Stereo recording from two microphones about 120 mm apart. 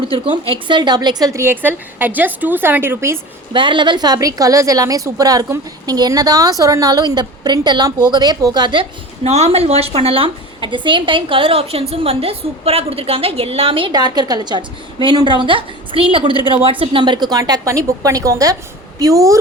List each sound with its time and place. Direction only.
0.0 s a woman's voice: 50° right (ahead or behind)
0.7 s a woman's voice: 35° right (ahead or behind); by 3.2 s 20° right (ahead or behind)
3.5 s a woman's voice: 40° right (ahead or behind)
9.2 s a woman's voice: 60° right (ahead or behind); by 19.4 s 30° right (ahead or behind)